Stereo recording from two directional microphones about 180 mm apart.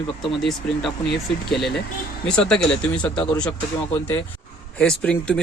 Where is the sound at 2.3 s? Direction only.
5° left (ahead or behind).